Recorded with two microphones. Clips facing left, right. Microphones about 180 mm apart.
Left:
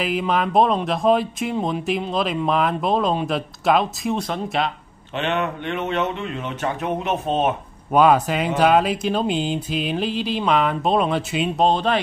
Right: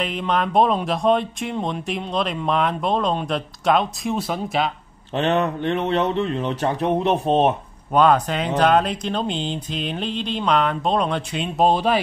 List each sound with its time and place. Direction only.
0.0 s speech: 5° left (ahead or behind)
5.1 s speech: 35° right (ahead or behind)
7.9 s speech: 5° left (ahead or behind)
11.6 s speech: 10° right (ahead or behind)